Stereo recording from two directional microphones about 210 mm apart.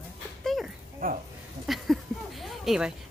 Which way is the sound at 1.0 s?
40° right (ahead or behind).